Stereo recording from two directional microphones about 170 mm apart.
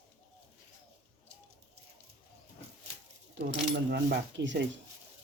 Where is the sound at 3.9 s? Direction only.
80° right.